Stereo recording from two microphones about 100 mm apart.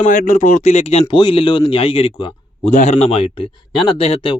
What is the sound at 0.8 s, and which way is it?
Speech, 90° left.